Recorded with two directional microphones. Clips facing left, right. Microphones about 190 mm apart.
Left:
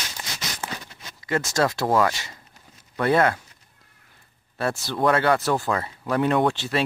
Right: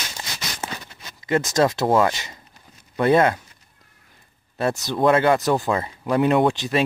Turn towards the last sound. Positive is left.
turn(degrees=-15)  # may be behind; listen again after turning